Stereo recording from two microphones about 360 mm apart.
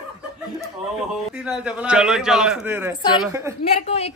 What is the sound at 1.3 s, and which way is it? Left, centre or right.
A woman's voice, centre.